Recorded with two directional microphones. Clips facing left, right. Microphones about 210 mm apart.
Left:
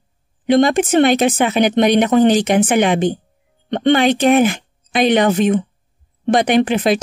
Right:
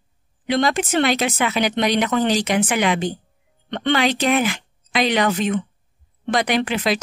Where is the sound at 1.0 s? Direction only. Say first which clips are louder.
Left 7 dB; 50° left (ahead or behind).